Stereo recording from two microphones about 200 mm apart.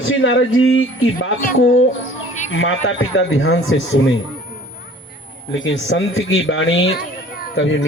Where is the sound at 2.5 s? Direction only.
75° left (ahead or behind).